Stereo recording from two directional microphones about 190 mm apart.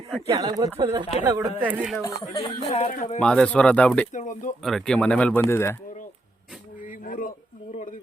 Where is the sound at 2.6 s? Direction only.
35° left (ahead or behind).